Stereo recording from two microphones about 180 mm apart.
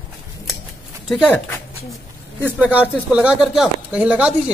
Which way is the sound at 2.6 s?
10° right (ahead or behind).